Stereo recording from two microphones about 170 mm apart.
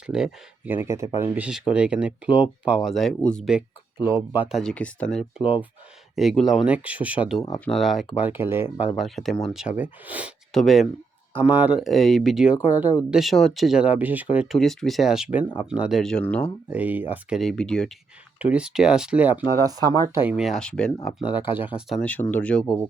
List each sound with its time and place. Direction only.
0.1 s speech: 5° right (ahead or behind)
4.0 s speech: 15° right (ahead or behind)
4.5 s speech: 5° left (ahead or behind); by 8.9 s 15° right (ahead or behind)
9.0 s speech: centre (ahead or behind)
11.3 s speech: 10° right (ahead or behind); by 16.5 s 5° left (ahead or behind)
16.7 s speech: 10° right (ahead or behind)
19.6 s speech: 20° right (ahead or behind)
20.1 s speech: 10° right (ahead or behind); by 22.6 s 10° left (ahead or behind)